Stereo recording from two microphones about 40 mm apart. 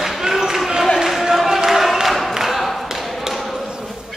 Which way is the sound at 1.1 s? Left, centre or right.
Centre.